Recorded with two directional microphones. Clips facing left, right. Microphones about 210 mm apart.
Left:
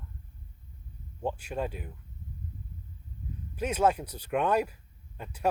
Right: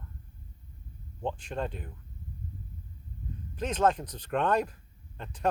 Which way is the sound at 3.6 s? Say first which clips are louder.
Even; 10° left (ahead or behind).